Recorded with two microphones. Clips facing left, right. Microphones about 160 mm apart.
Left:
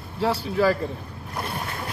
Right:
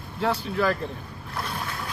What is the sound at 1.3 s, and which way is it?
Boat, 25° left (ahead or behind).